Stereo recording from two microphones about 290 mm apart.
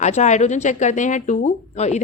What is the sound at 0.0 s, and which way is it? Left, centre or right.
A woman's voice, left.